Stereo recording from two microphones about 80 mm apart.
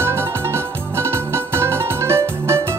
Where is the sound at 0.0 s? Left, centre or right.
Right.